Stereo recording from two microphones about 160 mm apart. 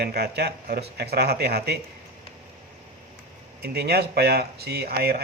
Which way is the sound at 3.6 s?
90° right.